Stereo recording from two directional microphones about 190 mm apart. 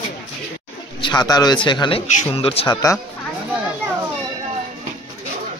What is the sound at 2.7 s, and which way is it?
Speech, 20° left (ahead or behind).